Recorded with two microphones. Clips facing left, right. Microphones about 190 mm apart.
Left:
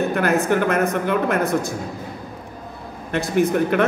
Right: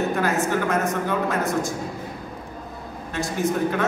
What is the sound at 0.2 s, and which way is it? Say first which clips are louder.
Speech: left 4 dB; 65° left (ahead or behind).